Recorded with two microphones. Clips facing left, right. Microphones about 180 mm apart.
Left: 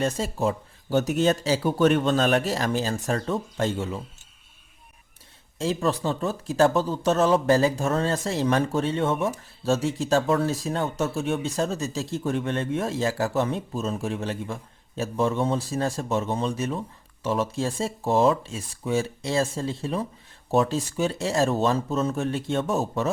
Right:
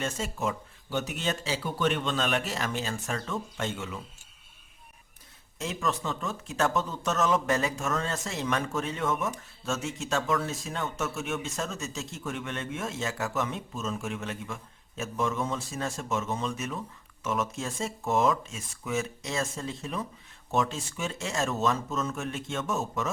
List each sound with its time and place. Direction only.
0.0 s speech: 35° left (ahead or behind)
5.5 s speech: 30° left (ahead or behind)